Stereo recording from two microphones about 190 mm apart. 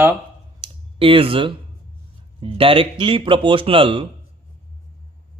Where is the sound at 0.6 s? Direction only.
30° right (ahead or behind).